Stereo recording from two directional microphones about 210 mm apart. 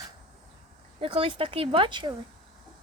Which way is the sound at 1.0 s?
25° right (ahead or behind).